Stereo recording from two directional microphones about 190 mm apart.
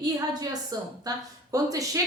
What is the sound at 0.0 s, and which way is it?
A woman's voice, 20° right (ahead or behind).